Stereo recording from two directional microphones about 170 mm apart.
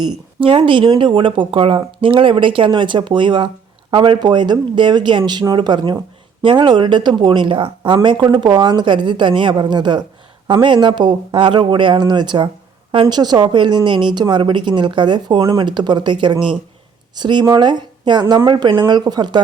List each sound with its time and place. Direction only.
0.3 s speech: 30° right (ahead or behind)